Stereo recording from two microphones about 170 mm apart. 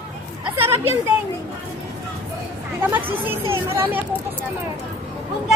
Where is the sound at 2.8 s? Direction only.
10° right (ahead or behind).